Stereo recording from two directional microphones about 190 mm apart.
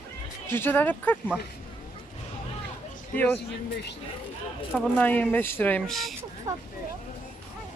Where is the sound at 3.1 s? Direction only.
5° left (ahead or behind).